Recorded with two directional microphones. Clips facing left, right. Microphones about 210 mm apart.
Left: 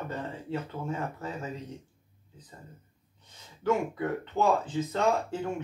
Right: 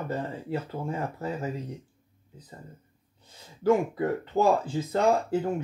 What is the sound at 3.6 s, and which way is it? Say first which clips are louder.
Speech: right 5 dB; 35° right (ahead or behind).